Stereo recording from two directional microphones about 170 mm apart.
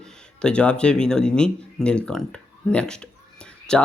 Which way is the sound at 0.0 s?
5° left (ahead or behind).